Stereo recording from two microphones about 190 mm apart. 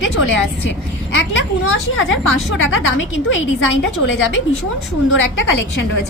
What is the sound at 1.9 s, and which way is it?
A woman's voice, 90° left.